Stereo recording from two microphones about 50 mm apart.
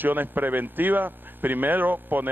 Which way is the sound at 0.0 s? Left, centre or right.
Right.